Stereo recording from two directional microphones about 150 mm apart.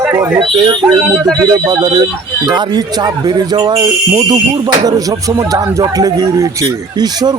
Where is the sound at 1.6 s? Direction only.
25° right (ahead or behind).